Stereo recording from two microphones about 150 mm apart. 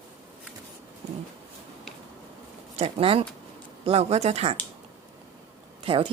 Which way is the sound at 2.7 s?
40° right (ahead or behind).